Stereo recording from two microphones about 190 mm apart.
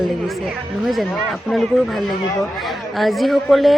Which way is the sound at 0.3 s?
Centre (ahead or behind).